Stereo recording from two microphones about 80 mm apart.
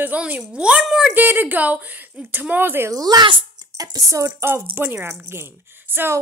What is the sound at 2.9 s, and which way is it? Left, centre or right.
Speech, right.